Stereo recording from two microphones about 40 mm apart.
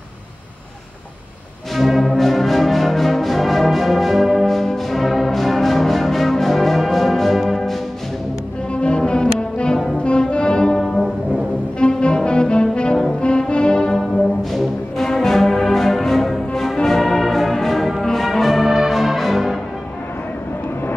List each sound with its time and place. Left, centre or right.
1.8 s music: centre
8.7 s brass instrument: left
10.0 s music: left
10.8 s brass instrument: centre
11.8 s brass instrument: left
13.2 s music: left
13.9 s brass instrument: centre